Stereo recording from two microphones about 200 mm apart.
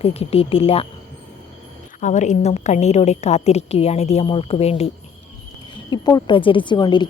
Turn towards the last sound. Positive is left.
turn(degrees=20)  # may be behind; listen again after turning